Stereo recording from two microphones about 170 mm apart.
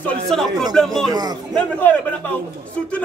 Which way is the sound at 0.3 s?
Centre (ahead or behind).